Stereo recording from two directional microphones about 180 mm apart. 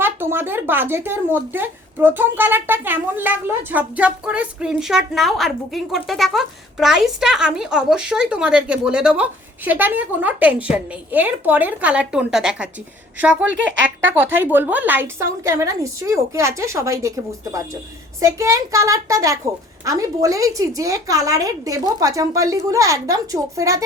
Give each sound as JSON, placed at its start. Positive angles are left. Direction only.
{"t": 0.0, "sound": "speech", "side_deg": -10}
{"t": 18.2, "sound": "a woman's voice", "side_deg": -15}